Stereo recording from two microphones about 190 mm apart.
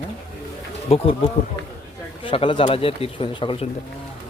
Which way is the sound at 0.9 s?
30° left (ahead or behind).